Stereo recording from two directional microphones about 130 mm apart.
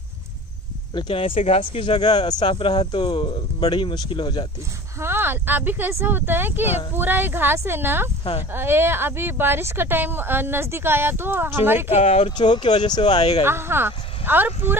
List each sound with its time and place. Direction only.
0.9 s speech: 40° left (ahead or behind)
5.0 s speech: 15° right (ahead or behind)
11.9 s speech: 60° left (ahead or behind)
12.3 s speech: 35° left (ahead or behind)
13.4 s speech: 20° right (ahead or behind)